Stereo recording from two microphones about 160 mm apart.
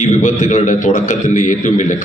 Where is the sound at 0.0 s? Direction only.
50° left (ahead or behind).